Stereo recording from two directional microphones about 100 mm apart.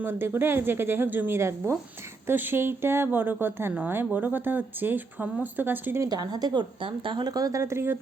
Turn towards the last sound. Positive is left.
turn(degrees=-25)  # may be behind; listen again after turning